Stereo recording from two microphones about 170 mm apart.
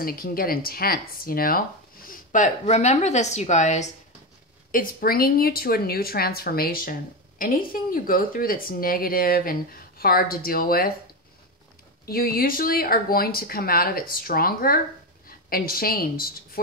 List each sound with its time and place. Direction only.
0.0 s a woman's voice: 60° left (ahead or behind); by 3.9 s 45° left (ahead or behind)
4.6 s speech: 55° left (ahead or behind)
12.1 s speech: 60° left (ahead or behind)